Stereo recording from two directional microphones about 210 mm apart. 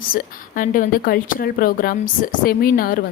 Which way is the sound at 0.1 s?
40° left (ahead or behind).